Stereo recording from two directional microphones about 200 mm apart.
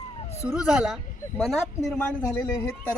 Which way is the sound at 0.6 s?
5° right (ahead or behind).